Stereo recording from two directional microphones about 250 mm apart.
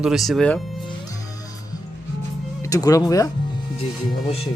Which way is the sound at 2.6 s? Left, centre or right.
Centre.